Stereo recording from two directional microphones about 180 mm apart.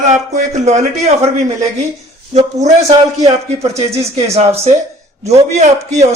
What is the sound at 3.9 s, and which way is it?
A man's voice, 35° right (ahead or behind).